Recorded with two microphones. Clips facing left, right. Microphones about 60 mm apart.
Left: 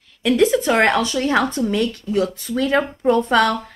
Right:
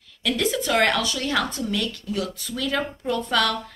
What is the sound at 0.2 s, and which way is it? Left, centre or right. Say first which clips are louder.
A woman's voice: left 8 dB; left.